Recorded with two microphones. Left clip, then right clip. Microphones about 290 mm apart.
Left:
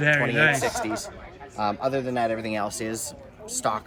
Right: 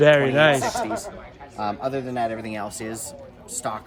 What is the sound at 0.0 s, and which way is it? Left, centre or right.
Speech, centre.